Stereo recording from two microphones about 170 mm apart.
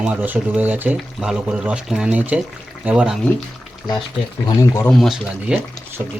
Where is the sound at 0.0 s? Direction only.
10° right (ahead or behind).